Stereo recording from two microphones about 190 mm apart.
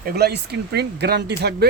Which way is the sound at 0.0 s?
55° right (ahead or behind).